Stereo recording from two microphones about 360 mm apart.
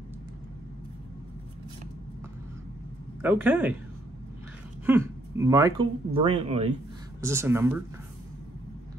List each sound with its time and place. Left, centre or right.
3.2 s speech: centre
4.8 s speech: centre